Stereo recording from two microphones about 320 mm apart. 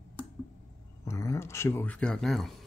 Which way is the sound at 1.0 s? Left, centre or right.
Centre.